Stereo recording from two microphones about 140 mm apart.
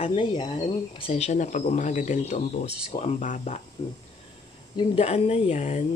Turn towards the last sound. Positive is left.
turn(degrees=50)  # may be behind; listen again after turning